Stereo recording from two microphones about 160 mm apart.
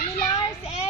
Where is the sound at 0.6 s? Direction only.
40° left (ahead or behind).